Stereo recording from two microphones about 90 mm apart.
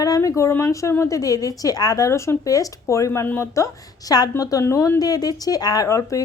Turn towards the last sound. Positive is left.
turn(degrees=35)  # may be behind; listen again after turning